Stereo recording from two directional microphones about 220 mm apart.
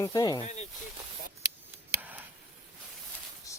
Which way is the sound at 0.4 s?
30° left (ahead or behind).